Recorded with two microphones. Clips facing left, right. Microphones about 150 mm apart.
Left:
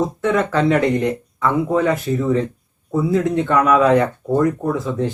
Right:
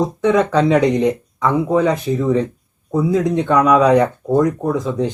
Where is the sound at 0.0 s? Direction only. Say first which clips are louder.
Right 3 dB; 15° right (ahead or behind).